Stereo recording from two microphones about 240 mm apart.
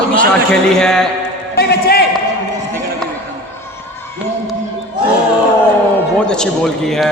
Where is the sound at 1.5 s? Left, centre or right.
Left.